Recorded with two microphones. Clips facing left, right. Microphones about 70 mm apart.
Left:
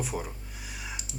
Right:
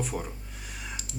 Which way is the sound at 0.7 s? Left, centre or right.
Centre.